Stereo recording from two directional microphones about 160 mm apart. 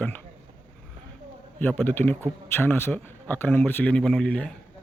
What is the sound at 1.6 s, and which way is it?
Speech, 10° left (ahead or behind).